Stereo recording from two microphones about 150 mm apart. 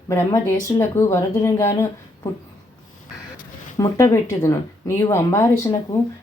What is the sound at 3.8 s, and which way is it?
Speech, 25° left (ahead or behind).